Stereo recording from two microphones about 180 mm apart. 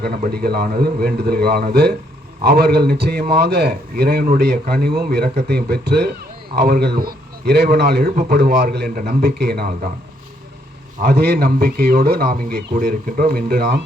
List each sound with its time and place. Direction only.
0.3 s a man's voice: 60° right (ahead or behind)
8.1 s speech: 45° right (ahead or behind)
8.4 s a man's voice: 60° right (ahead or behind)
11.0 s a man's voice: 60° right (ahead or behind)